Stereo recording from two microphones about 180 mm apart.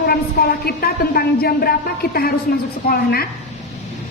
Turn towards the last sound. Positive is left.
turn(degrees=60)  # may be behind; listen again after turning